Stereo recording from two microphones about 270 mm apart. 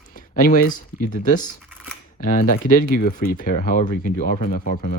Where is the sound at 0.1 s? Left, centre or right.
Left.